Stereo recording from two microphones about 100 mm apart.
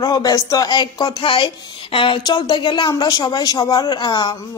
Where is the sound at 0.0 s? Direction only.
40° left (ahead or behind); by 2.1 s 60° left (ahead or behind).